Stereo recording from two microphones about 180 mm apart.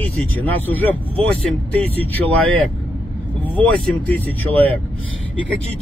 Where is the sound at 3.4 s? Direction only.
10° left (ahead or behind).